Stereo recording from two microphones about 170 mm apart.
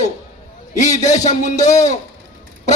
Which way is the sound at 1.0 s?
45° left (ahead or behind).